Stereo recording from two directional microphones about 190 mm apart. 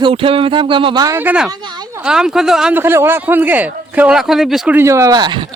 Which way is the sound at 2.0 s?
5° right (ahead or behind).